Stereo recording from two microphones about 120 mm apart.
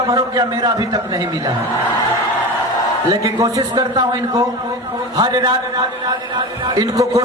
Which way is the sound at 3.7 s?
35° right (ahead or behind).